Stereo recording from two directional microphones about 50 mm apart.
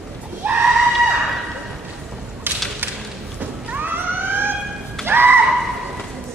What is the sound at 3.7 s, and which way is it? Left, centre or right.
Police car, right.